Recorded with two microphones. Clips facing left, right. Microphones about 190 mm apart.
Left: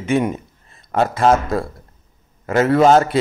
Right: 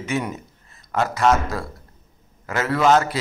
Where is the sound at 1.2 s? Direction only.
30° left (ahead or behind).